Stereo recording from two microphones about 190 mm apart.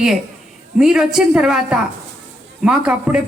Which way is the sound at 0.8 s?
5° right (ahead or behind).